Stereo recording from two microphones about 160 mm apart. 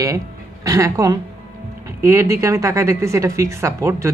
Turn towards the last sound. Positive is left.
turn(degrees=-20)  # may be behind; listen again after turning